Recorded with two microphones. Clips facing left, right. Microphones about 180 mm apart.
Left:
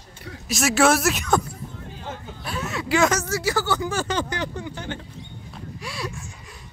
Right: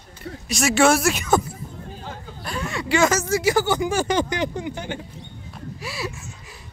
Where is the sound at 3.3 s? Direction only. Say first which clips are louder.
Right 4 dB; 15° right (ahead or behind).